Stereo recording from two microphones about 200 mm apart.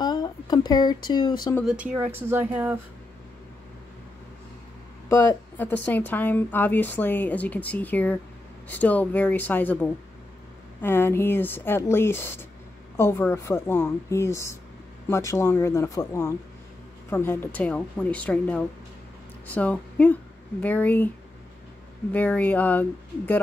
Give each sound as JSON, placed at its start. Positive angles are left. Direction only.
{"t": 0.0, "sound": "speech", "side_deg": 20}
{"t": 2.1, "sound": "speech", "side_deg": -10}
{"t": 5.1, "sound": "speech", "side_deg": 10}
{"t": 22.1, "sound": "speech", "side_deg": 10}